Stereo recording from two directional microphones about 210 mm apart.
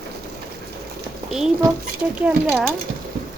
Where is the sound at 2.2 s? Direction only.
5° right (ahead or behind).